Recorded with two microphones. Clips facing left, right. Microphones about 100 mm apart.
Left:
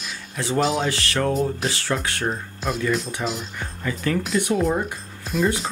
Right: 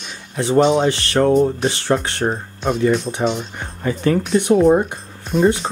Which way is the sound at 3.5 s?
30° right (ahead or behind).